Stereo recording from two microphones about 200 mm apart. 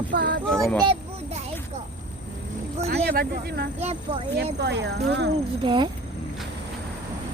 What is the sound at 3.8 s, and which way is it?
Speech, 30° right (ahead or behind).